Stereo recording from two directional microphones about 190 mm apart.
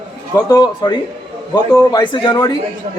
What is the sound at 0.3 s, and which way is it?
Speech, 20° left (ahead or behind).